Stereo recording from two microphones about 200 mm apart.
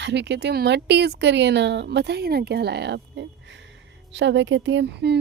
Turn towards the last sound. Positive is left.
turn(degrees=-55)  # may be behind; listen again after turning